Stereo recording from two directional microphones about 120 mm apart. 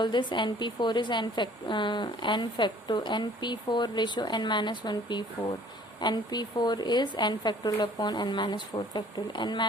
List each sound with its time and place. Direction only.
0.0 s a woman's voice: 40° left (ahead or behind)